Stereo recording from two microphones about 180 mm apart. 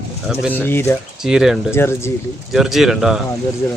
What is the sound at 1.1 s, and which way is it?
Speech, 5° right (ahead or behind).